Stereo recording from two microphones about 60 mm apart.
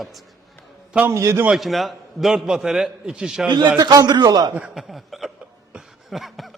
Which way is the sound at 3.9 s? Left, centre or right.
Right.